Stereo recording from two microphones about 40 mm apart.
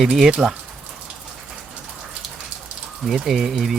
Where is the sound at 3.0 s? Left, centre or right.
Centre.